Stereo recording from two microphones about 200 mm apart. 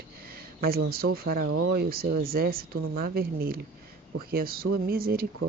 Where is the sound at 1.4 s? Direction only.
90° right.